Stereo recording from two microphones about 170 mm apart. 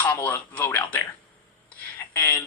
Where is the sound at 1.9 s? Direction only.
10° left (ahead or behind).